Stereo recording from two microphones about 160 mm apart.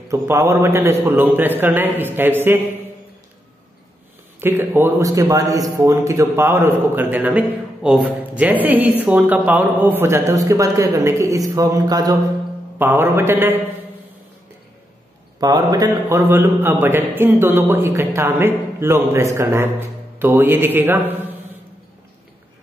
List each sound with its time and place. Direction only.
0.1 s a man's voice: 20° right (ahead or behind)
4.4 s a man's voice: 15° right (ahead or behind)
12.7 s a man's voice: 15° right (ahead or behind)
15.4 s a man's voice: 25° right (ahead or behind)